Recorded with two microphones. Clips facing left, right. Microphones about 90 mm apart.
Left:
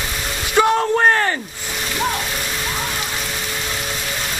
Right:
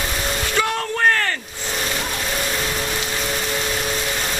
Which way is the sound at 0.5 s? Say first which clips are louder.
Left 9 dB; 20° left (ahead or behind).